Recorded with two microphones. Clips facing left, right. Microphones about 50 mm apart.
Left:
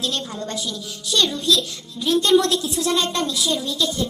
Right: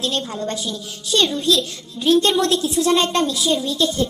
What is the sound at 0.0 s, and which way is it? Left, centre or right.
A woman's voice, right.